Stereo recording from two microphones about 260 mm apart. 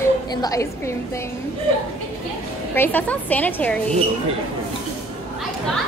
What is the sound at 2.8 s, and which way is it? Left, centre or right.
A woman's voice, centre.